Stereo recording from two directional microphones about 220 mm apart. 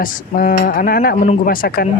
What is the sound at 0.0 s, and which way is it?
Speech, 40° left (ahead or behind).